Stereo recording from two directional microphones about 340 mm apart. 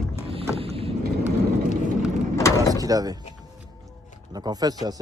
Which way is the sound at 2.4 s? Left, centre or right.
Centre.